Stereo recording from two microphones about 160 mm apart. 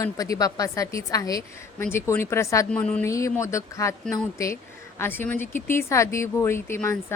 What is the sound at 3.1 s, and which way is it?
A woman's voice, 20° left (ahead or behind).